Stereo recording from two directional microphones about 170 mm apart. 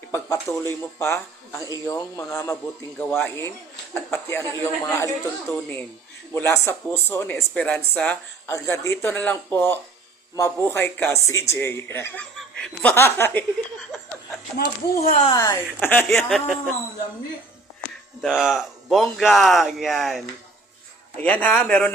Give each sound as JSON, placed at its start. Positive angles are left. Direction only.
{"t": 0.1, "sound": "speech", "side_deg": 15}
{"t": 15.0, "sound": "speech", "side_deg": 50}
{"t": 15.3, "sound": "speech", "side_deg": 20}
{"t": 18.2, "sound": "speech", "side_deg": 0}